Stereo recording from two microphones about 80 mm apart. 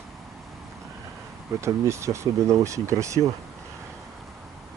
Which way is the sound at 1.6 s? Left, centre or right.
Right.